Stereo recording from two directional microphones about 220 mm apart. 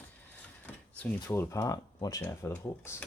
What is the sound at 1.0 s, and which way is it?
Speech, 10° left (ahead or behind).